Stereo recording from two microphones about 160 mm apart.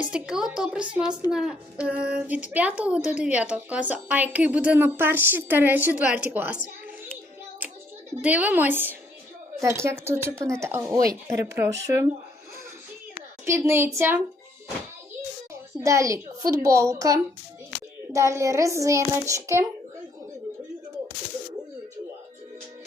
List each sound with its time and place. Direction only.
0.0 s a woman's voice: 5° right (ahead or behind)
8.2 s a woman's voice: 10° right (ahead or behind)
13.4 s a woman's voice: 15° right (ahead or behind)
15.8 s a child's voice: 20° right (ahead or behind)